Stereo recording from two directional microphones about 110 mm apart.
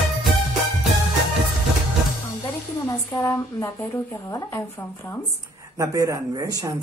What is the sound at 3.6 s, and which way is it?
A woman's voice, 30° left (ahead or behind).